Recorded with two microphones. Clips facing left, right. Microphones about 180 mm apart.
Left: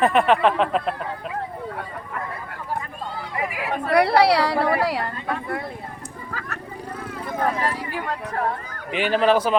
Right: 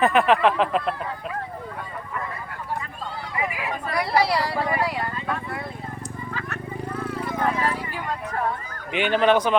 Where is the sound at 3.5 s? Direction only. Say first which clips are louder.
Left 7 dB; 60° left (ahead or behind).